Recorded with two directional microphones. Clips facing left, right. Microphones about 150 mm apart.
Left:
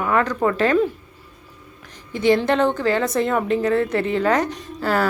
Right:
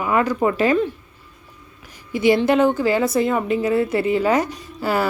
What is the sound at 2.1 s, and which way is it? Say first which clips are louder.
A woman's voice: right 2 dB; 10° right (ahead or behind).